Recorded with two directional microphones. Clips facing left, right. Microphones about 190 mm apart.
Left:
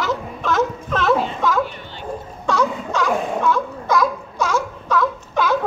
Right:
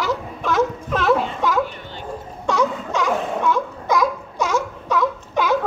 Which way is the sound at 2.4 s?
20° right (ahead or behind).